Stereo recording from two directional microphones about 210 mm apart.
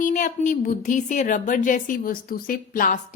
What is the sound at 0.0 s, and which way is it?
A woman's voice, 35° left (ahead or behind).